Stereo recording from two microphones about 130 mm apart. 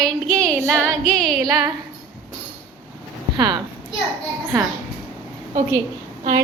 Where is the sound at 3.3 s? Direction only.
35° right (ahead or behind).